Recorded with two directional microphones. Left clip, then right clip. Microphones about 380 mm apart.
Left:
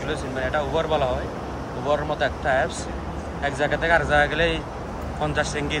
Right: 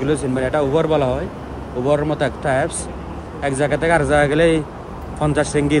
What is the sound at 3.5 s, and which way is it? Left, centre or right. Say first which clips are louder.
A man's voice: right 4 dB; centre.